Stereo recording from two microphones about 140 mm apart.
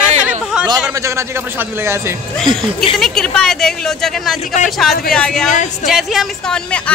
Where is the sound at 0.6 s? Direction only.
5° right (ahead or behind).